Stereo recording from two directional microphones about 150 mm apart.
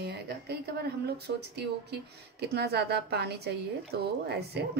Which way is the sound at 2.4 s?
90° right.